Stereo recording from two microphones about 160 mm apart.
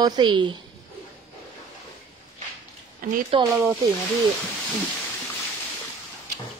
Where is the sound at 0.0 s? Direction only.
25° right (ahead or behind).